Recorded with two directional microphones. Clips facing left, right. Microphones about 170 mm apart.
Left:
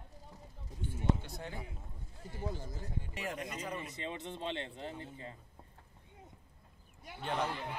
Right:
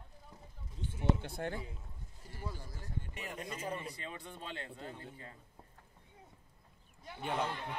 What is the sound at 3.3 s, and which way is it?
Speech, 30° right (ahead or behind).